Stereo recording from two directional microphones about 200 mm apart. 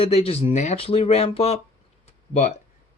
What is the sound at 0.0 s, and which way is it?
Speech, 30° left (ahead or behind).